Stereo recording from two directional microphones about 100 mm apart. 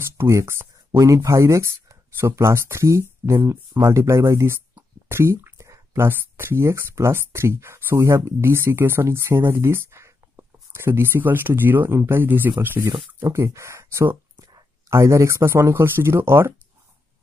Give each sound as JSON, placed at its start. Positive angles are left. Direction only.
{"t": 0.2, "sound": "speech", "side_deg": -30}